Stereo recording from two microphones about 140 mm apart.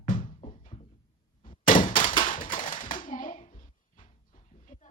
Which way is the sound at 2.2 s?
70° left (ahead or behind).